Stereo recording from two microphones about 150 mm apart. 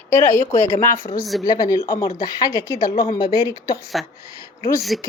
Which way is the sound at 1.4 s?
25° left (ahead or behind).